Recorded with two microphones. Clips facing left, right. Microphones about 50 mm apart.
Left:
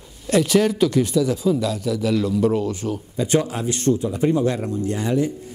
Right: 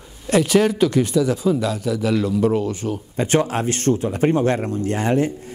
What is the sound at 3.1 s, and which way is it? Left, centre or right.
Speech, right.